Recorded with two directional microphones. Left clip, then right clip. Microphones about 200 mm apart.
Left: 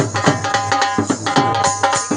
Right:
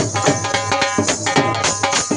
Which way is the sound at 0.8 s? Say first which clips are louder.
Even; 25° right (ahead or behind).